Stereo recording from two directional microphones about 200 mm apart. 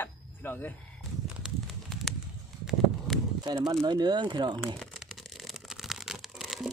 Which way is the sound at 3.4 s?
20° right (ahead or behind).